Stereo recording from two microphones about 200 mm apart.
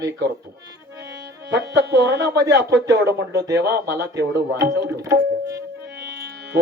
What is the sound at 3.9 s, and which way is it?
Speech, 15° right (ahead or behind).